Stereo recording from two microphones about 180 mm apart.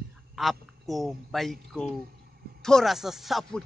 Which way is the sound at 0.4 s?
Centre (ahead or behind).